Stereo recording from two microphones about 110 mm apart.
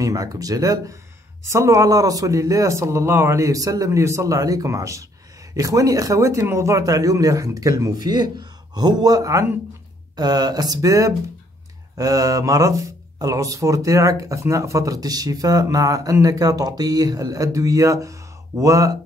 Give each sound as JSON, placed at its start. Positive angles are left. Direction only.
{"t": 0.0, "sound": "speech", "side_deg": -35}
{"t": 10.1, "sound": "speech", "side_deg": -40}